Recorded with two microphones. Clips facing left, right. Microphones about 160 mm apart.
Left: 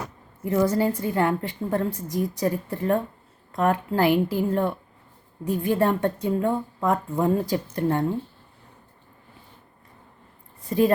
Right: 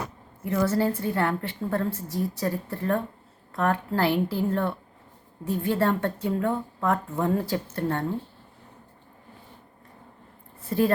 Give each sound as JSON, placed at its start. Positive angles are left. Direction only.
{"t": 0.4, "sound": "a woman's voice", "side_deg": 15}
{"t": 10.7, "sound": "a woman's voice", "side_deg": 15}